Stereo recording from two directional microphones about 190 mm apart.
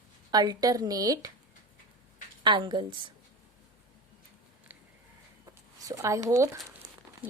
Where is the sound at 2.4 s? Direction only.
25° right (ahead or behind).